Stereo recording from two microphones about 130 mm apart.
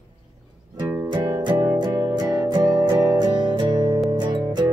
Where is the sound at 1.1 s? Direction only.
35° right (ahead or behind).